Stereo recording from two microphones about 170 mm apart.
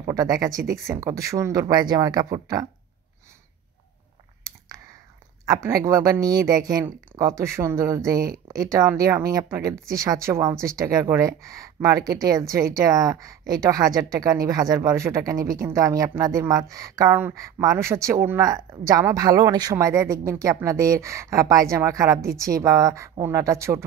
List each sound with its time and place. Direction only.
0.0 s speech: 20° right (ahead or behind)
5.4 s speech: 20° right (ahead or behind)